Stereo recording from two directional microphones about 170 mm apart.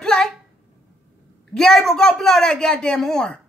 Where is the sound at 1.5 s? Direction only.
5° left (ahead or behind).